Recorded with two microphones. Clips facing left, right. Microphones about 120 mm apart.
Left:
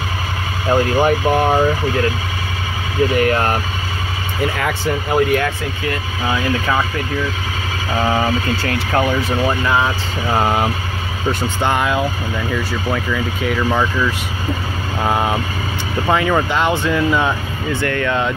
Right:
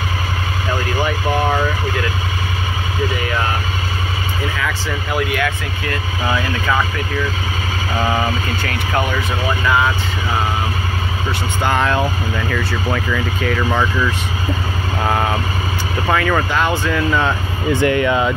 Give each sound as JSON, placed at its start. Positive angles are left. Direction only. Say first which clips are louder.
{"t": 0.7, "sound": "speech", "louder": "left 7 dB", "side_deg": 45}
{"t": 3.2, "sound": "speech", "louder": "left 5 dB", "side_deg": 55}
{"t": 4.6, "sound": "speech", "louder": "left 3 dB", "side_deg": 55}
{"t": 8.6, "sound": "speech", "louder": "left 2 dB", "side_deg": 30}
{"t": 11.6, "sound": "speech", "louder": "right 1 dB", "side_deg": 15}
{"t": 17.7, "sound": "speech", "louder": "right 3 dB", "side_deg": -10}